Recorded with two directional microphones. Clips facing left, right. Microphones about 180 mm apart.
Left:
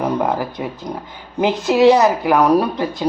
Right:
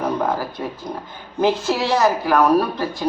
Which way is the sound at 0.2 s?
20° left (ahead or behind).